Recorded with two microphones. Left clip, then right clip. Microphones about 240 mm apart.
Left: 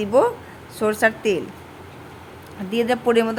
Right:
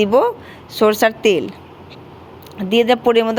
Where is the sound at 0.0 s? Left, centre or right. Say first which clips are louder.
Right 4 dB; centre.